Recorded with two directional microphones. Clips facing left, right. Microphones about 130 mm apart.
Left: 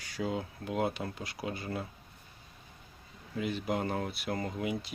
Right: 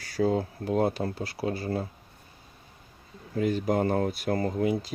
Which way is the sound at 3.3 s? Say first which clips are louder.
Right 7 dB; 45° right (ahead or behind).